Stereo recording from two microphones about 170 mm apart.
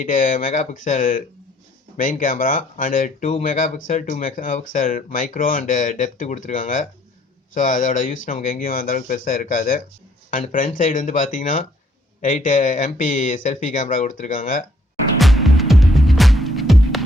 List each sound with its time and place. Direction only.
0.0 s speech: 50° left (ahead or behind)
15.2 s music: centre (ahead or behind)